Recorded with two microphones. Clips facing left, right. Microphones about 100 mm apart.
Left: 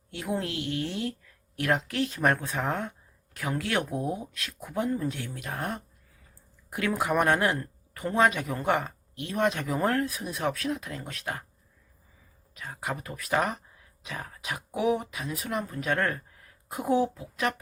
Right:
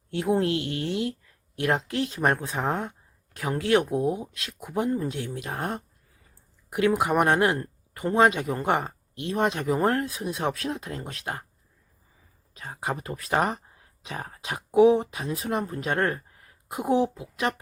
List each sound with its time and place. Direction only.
0.1 s speech: 30° right (ahead or behind)
12.5 s speech: 30° right (ahead or behind)